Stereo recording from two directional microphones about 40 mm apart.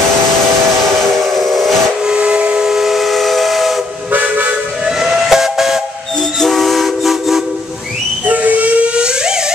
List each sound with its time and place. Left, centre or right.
1.5 s steam whistle: centre
2.1 s steam whistle: right
2.6 s steam whistle: centre
4.1 s toot: right
4.8 s steam whistle: centre
6.4 s train: centre
8.3 s steam whistle: right
8.8 s a sound: right